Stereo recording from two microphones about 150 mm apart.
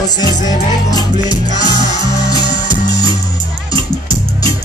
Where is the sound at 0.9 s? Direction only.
25° left (ahead or behind).